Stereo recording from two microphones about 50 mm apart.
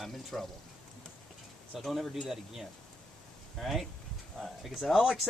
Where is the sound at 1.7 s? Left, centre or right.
Centre.